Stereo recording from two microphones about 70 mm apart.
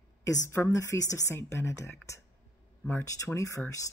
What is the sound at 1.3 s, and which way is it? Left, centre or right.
Speech, left.